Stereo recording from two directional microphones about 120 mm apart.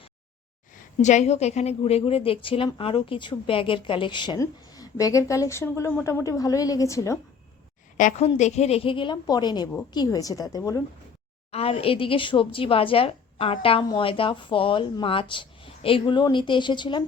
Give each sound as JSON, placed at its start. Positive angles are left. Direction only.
{"t": 1.0, "sound": "a woman's voice", "side_deg": 75}
{"t": 4.4, "sound": "a woman's voice", "side_deg": 30}
{"t": 7.9, "sound": "a woman's voice", "side_deg": 75}
{"t": 11.5, "sound": "speech", "side_deg": 50}